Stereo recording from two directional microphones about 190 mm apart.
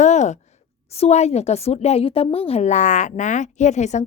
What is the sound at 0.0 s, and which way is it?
Sigh, 40° left (ahead or behind).